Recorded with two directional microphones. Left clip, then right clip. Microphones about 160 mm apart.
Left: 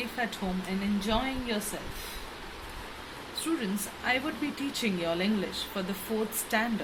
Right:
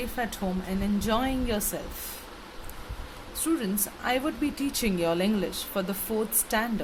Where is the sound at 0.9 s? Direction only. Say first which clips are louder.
Right 4 dB; 70° right (ahead or behind).